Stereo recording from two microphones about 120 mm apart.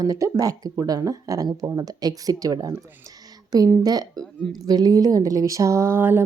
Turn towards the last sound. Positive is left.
turn(degrees=-20)  # may be behind; listen again after turning